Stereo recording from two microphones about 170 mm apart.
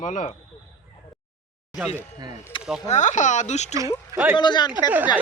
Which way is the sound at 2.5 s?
30° left (ahead or behind).